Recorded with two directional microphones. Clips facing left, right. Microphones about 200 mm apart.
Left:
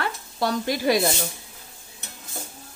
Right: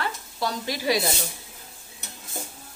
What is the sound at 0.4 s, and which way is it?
Speech, 50° left (ahead or behind).